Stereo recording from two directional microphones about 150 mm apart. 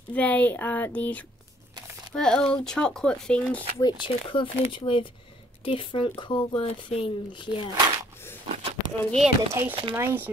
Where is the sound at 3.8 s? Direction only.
30° left (ahead or behind).